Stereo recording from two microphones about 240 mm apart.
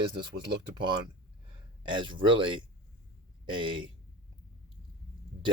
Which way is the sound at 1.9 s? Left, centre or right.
Right.